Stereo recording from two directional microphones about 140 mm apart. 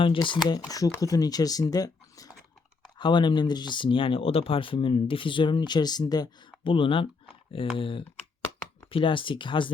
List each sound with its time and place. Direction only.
0.0 s speech: 35° left (ahead or behind)